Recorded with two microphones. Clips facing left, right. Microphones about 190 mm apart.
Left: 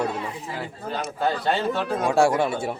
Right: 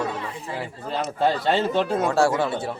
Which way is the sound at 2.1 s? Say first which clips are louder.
Left 4 dB; 15° left (ahead or behind).